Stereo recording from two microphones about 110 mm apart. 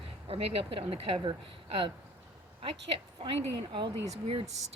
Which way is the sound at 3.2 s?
55° right (ahead or behind).